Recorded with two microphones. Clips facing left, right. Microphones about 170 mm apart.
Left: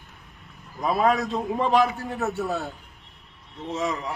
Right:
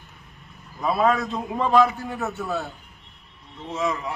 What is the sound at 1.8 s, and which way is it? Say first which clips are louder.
Speech: right 2 dB; 40° left (ahead or behind).